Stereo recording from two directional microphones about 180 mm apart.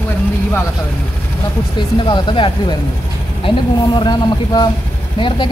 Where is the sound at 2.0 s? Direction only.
25° left (ahead or behind).